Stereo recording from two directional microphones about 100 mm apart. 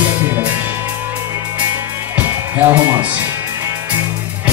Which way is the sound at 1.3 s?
30° right (ahead or behind).